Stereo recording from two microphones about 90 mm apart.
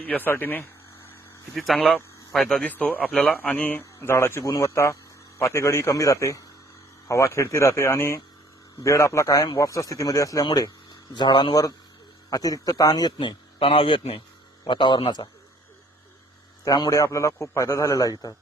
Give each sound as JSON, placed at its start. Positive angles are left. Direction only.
{"t": 0.0, "sound": "speech", "side_deg": 20}
{"t": 1.5, "sound": "speech", "side_deg": 0}
{"t": 2.6, "sound": "speech", "side_deg": 20}
{"t": 3.3, "sound": "a man's voice", "side_deg": 20}
{"t": 11.1, "sound": "speech", "side_deg": 60}
{"t": 12.3, "sound": "a man's voice", "side_deg": 45}
{"t": 13.1, "sound": "a man's voice", "side_deg": 80}
{"t": 14.6, "sound": "speech", "side_deg": 60}
{"t": 16.6, "sound": "a man's voice", "side_deg": 50}
{"t": 16.9, "sound": "speech", "side_deg": 35}